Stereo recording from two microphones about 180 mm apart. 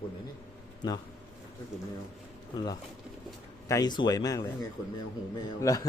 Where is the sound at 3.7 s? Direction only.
20° left (ahead or behind).